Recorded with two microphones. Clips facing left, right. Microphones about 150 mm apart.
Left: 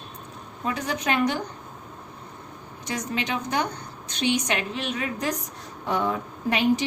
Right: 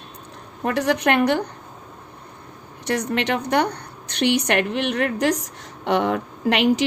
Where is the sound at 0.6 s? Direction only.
70° right (ahead or behind).